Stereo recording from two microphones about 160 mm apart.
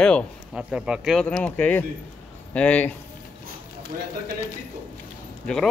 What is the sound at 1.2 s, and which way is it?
Speech, 10° left (ahead or behind).